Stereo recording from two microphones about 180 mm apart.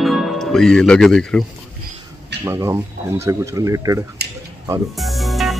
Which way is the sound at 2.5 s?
15° right (ahead or behind).